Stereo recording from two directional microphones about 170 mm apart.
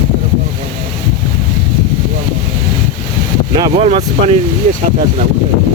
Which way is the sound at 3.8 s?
35° right (ahead or behind).